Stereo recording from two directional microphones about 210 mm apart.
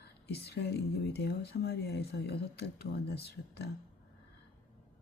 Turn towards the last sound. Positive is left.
turn(degrees=50)  # may be behind; listen again after turning